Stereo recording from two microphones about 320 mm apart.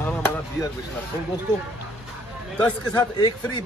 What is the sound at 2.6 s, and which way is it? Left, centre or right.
Speech, centre.